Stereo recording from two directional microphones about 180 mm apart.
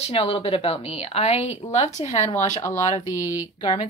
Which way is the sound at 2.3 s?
15° left (ahead or behind).